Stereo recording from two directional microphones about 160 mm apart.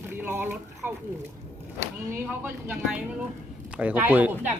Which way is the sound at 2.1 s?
15° right (ahead or behind).